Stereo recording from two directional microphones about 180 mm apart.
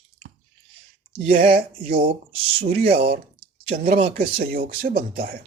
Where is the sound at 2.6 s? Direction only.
60° right (ahead or behind).